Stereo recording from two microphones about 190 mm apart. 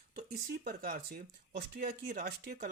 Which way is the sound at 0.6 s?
50° right (ahead or behind).